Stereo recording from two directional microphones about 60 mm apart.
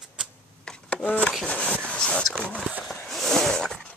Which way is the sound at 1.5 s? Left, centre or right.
Left.